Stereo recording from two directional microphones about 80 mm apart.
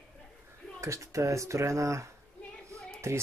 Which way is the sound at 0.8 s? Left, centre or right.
Right.